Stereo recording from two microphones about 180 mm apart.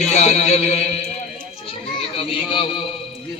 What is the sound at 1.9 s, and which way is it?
Children playing, 30° left (ahead or behind).